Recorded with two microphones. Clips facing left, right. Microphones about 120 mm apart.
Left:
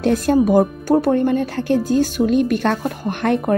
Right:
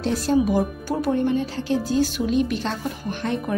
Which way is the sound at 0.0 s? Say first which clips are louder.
Left 5 dB; 55° left (ahead or behind).